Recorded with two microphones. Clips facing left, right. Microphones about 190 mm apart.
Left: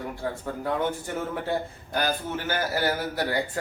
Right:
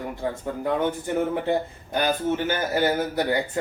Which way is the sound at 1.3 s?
20° right (ahead or behind).